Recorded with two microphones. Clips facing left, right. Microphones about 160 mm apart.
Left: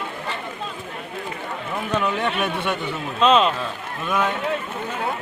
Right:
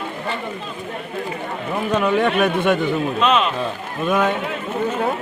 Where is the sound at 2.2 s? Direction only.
45° right (ahead or behind).